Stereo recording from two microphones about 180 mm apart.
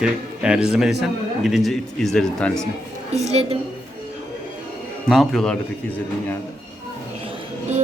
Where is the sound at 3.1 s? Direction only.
35° right (ahead or behind).